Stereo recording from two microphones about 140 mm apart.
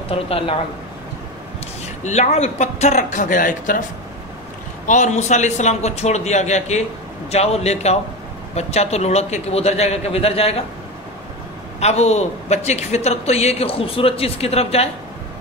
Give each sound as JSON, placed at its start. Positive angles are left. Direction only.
{"t": 0.1, "sound": "speech", "side_deg": 40}
{"t": 2.0, "sound": "a man's voice", "side_deg": 55}
{"t": 4.8, "sound": "a man's voice", "side_deg": 60}
{"t": 11.8, "sound": "a man's voice", "side_deg": 50}